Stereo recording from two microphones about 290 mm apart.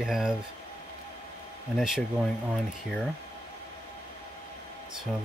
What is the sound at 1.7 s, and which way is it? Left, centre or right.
Speech, centre.